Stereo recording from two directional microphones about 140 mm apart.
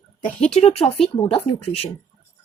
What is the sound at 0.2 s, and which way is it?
Speech, 60° left (ahead or behind).